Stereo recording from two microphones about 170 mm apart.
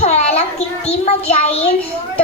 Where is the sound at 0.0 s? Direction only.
40° left (ahead or behind).